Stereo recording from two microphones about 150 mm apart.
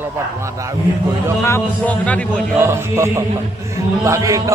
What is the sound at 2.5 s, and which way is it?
Music, 20° right (ahead or behind).